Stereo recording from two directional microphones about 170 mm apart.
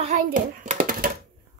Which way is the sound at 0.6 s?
50° right (ahead or behind).